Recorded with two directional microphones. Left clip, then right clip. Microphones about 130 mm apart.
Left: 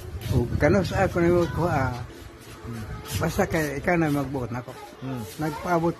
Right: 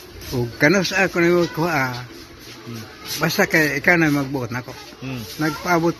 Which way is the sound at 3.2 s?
5° right (ahead or behind).